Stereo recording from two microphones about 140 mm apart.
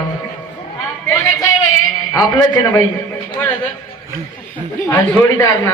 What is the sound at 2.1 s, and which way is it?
Speech, 25° left (ahead or behind).